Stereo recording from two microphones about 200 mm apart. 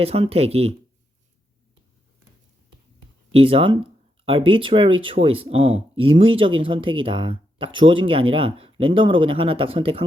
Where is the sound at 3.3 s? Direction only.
30° right (ahead or behind).